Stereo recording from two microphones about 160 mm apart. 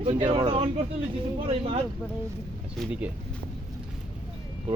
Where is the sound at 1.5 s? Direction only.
35° right (ahead or behind).